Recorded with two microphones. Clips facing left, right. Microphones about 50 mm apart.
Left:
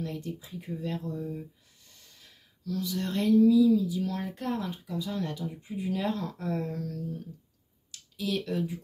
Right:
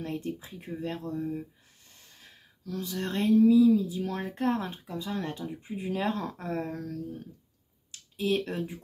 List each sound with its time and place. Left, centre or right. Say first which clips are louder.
0.0 s speech: right 2 dB; right
7.9 s speech: right 4 dB; right